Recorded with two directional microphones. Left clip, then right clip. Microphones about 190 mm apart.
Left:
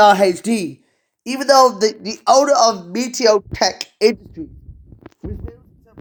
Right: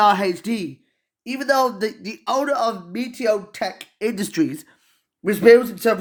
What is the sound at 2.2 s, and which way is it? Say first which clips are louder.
Speech: left 8 dB; 10° right (ahead or behind).